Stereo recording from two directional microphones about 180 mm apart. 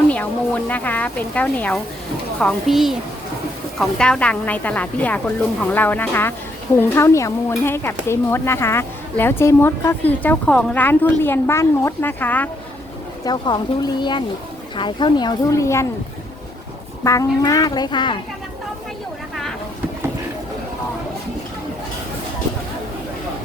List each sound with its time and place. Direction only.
0.1 s a child's voice: 10° left (ahead or behind)
13.2 s speech: 25° left (ahead or behind)
17.0 s speech: 20° left (ahead or behind)